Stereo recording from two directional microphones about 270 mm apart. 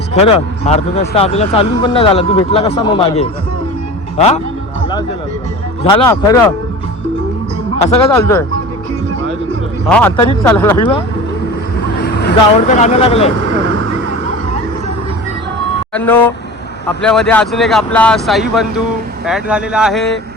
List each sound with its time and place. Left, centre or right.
0.1 s speech: left
5.8 s speech: centre
7.8 s speech: left
8.1 s speech: centre
10.4 s speech: centre
12.0 s speech: left
16.0 s speech: centre